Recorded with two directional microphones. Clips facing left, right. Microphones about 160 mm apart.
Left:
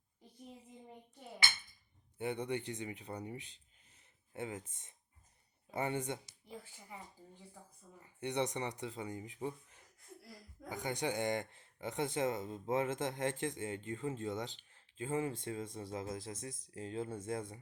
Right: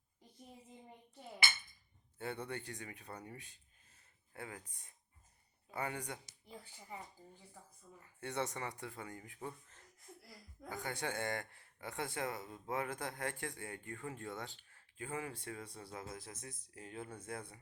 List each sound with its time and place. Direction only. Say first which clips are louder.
2.1 s speech: left 5 dB; 20° left (ahead or behind)
8.0 s speech: left 4 dB; 20° left (ahead or behind)